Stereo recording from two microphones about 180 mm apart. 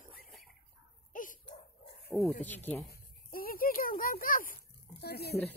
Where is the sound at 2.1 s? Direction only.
5° right (ahead or behind).